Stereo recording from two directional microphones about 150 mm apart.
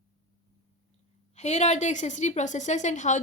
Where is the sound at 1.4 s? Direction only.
50° left (ahead or behind).